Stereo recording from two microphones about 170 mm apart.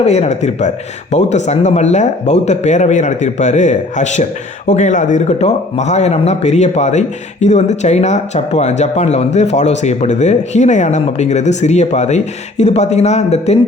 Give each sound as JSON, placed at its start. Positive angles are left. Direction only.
{"t": 0.0, "sound": "speech", "side_deg": 40}